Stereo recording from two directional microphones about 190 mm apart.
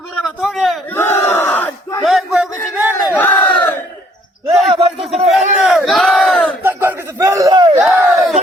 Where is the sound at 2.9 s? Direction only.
10° left (ahead or behind).